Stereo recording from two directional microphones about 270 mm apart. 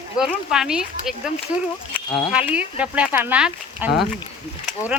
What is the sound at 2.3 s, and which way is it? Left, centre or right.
Speech, centre.